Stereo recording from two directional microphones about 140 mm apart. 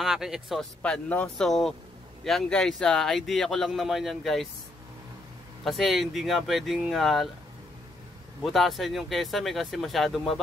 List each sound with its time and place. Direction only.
0.0 s speech: centre (ahead or behind)
5.6 s speech: centre (ahead or behind)
8.5 s speech: centre (ahead or behind)